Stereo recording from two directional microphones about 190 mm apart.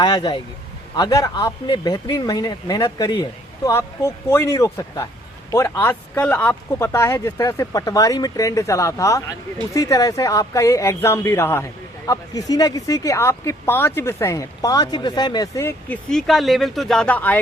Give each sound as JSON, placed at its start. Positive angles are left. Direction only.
{"t": 0.0, "sound": "a man's voice", "side_deg": 25}